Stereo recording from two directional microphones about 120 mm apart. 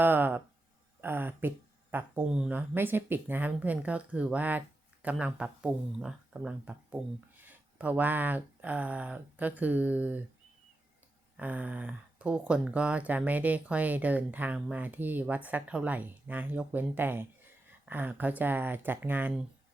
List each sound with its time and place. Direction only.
0.0 s a sound: 15° right (ahead or behind)
1.0 s speech: 15° right (ahead or behind)
11.3 s speech: 10° right (ahead or behind)